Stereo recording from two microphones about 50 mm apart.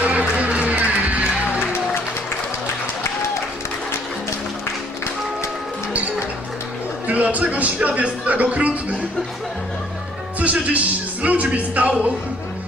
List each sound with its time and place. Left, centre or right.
0.0 s music: right
7.1 s speech: right
10.4 s speech: right